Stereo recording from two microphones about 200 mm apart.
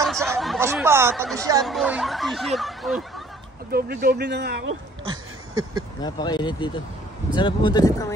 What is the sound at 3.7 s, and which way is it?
Speech, 50° right (ahead or behind).